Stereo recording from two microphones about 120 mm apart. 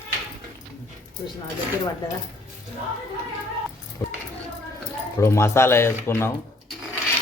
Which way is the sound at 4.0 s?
30° left (ahead or behind).